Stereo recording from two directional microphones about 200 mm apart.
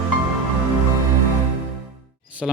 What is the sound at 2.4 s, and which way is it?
Speech, centre (ahead or behind).